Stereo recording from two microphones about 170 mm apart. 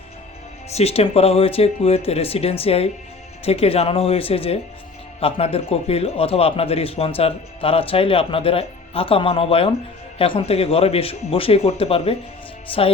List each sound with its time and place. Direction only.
0.7 s a man's voice: 40° left (ahead or behind)